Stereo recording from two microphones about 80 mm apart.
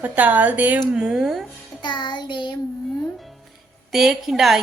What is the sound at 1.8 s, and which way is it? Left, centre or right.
Music, left.